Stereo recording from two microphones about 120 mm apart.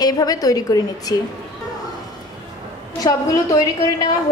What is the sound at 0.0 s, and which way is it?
A woman's voice, 30° left (ahead or behind).